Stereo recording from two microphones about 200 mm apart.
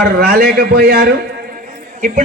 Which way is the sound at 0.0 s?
45° right (ahead or behind).